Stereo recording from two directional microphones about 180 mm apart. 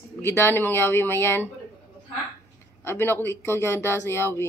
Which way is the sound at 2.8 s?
10° left (ahead or behind).